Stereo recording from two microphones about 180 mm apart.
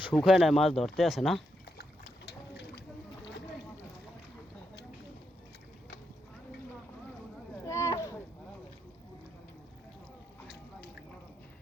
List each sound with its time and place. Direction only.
0.1 s speech: centre (ahead or behind)
1.8 s boat: 65° left (ahead or behind)
7.7 s a sound: 15° left (ahead or behind)